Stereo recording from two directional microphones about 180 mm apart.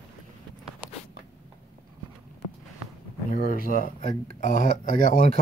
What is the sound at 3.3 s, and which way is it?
Speech, 55° left (ahead or behind).